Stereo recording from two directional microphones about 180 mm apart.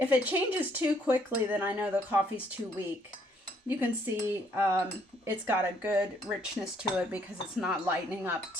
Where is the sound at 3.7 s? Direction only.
10° right (ahead or behind).